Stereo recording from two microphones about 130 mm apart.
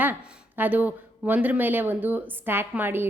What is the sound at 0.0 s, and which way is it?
A woman's voice, 15° right (ahead or behind).